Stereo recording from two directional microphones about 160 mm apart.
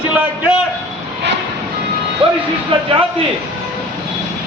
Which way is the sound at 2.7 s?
30° right (ahead or behind).